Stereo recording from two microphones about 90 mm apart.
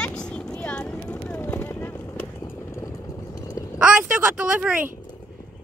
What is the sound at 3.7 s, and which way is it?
Speech, 15° right (ahead or behind).